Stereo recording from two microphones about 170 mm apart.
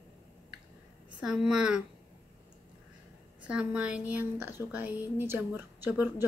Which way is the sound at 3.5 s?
5° right (ahead or behind).